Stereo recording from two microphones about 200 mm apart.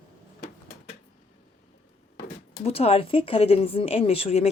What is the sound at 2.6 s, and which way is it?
Speech, 30° left (ahead or behind).